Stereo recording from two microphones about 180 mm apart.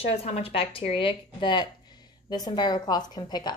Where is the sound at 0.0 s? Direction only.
35° left (ahead or behind).